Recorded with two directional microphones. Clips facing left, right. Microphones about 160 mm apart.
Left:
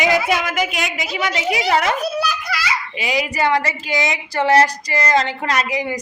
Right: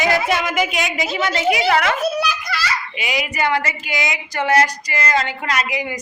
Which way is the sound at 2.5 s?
10° left (ahead or behind).